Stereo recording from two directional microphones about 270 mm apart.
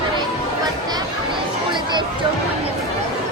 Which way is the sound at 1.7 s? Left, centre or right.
Centre.